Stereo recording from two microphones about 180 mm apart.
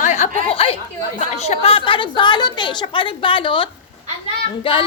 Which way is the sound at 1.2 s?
35° left (ahead or behind).